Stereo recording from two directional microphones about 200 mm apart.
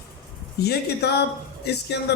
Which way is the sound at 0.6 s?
55° left (ahead or behind).